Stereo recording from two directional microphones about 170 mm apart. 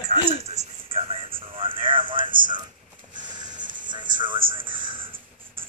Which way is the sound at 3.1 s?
25° right (ahead or behind).